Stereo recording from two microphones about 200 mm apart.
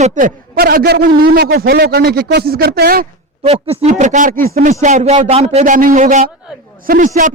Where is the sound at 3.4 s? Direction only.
30° right (ahead or behind).